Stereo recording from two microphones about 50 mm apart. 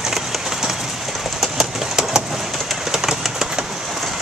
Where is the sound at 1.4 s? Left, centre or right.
Centre.